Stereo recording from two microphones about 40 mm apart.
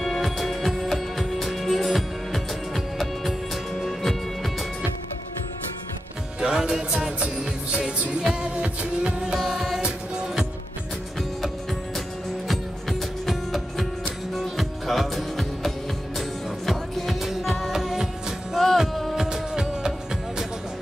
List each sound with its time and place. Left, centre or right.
0.0 s music: centre
6.4 s music: centre
8.6 s music: right
9.4 s music: centre
9.8 s music: right
13.3 s music: centre